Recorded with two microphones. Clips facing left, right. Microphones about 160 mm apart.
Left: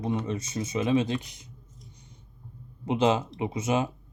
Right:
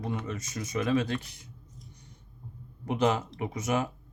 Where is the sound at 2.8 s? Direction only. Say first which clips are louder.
Left 3 dB; 25° left (ahead or behind).